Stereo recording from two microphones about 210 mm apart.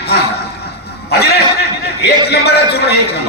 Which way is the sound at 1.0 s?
50° left (ahead or behind).